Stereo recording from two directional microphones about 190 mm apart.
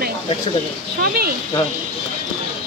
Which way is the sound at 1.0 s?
55° right (ahead or behind).